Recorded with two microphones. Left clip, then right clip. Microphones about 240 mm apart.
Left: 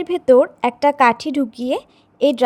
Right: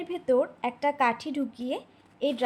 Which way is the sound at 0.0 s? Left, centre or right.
Left.